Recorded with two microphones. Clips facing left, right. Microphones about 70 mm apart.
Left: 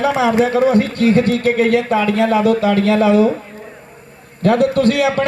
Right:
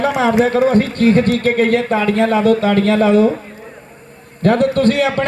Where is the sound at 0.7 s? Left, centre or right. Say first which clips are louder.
Right 1 dB; right.